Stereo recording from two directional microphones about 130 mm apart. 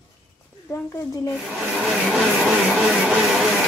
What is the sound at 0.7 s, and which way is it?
Speech, 25° left (ahead or behind).